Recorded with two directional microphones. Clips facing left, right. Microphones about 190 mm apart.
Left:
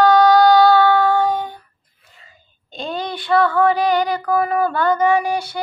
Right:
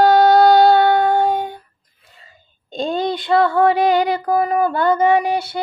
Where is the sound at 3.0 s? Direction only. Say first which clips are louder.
Even; 20° right (ahead or behind).